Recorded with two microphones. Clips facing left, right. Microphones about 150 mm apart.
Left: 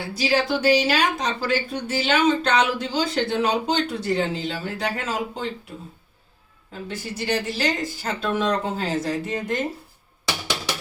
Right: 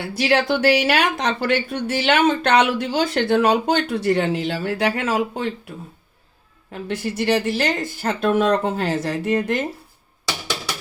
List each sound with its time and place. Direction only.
0.2 s speech: 65° right (ahead or behind)
6.7 s speech: 65° right (ahead or behind)